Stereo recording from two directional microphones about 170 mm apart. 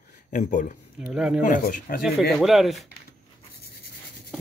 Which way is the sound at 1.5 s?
50° left (ahead or behind).